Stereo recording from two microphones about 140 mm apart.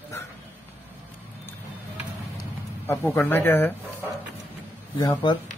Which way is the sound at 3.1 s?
15° left (ahead or behind).